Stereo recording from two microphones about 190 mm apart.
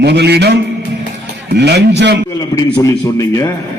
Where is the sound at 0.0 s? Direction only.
60° right (ahead or behind).